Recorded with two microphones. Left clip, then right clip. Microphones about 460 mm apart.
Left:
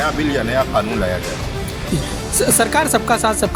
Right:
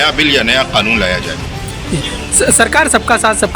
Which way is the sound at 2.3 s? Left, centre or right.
Left.